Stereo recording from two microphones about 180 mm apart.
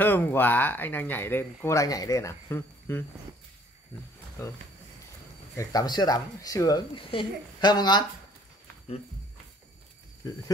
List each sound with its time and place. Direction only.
0.0 s speech: 10° left (ahead or behind)
5.6 s speech: 20° left (ahead or behind)